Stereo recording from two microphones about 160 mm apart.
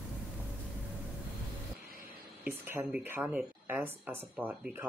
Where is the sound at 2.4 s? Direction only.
10° right (ahead or behind).